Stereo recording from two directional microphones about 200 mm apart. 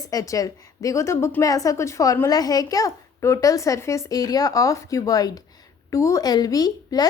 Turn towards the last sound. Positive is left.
turn(degrees=20)  # may be behind; listen again after turning